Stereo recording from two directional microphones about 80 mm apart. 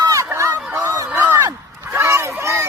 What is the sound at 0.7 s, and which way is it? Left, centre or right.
Honk, right.